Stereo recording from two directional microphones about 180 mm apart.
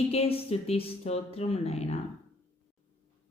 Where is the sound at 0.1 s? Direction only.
35° left (ahead or behind).